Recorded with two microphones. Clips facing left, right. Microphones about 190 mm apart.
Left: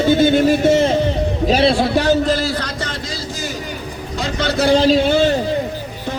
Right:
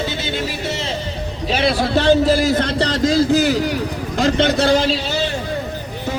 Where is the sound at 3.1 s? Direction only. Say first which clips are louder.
Right 12 dB; 55° right (ahead or behind); by 3.7 s 75° right (ahead or behind).